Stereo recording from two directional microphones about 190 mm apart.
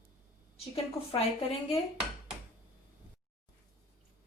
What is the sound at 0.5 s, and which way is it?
Speech, 30° left (ahead or behind).